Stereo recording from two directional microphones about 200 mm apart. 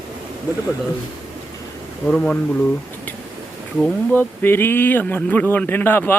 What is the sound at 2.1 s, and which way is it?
Speech, 5° left (ahead or behind).